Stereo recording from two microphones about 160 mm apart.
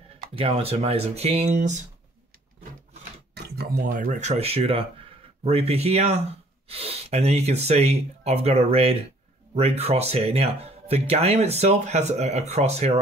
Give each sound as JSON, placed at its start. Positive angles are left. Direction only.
{"t": 0.3, "sound": "speech", "side_deg": -35}
{"t": 3.3, "sound": "speech", "side_deg": -85}